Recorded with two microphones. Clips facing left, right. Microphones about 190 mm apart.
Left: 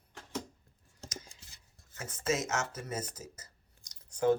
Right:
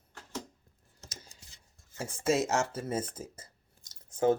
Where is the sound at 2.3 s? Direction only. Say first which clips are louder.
Right 6 dB; 35° right (ahead or behind).